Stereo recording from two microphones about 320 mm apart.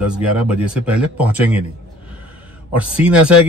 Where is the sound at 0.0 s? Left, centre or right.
Centre.